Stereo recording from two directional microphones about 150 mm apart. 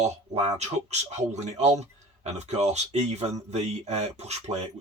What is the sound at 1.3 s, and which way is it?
Speech, 45° right (ahead or behind).